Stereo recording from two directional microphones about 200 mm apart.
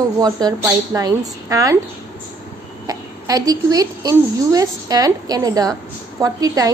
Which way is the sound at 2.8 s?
20° right (ahead or behind).